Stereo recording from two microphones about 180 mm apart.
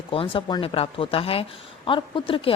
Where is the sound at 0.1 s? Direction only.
30° left (ahead or behind).